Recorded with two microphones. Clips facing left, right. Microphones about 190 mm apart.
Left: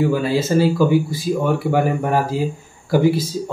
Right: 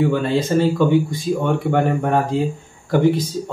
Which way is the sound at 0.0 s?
5° left (ahead or behind).